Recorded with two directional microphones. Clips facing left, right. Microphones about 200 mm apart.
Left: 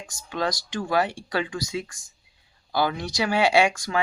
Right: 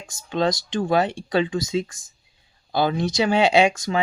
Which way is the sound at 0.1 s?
25° right (ahead or behind).